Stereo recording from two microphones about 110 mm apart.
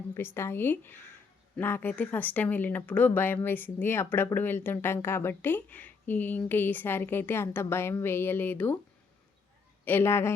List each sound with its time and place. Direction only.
0.1 s speech: 20° left (ahead or behind)
9.8 s speech: 20° left (ahead or behind)